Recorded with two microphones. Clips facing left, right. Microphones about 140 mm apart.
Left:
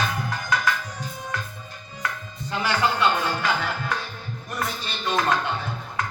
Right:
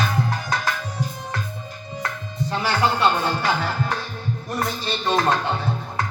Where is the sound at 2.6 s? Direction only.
35° right (ahead or behind).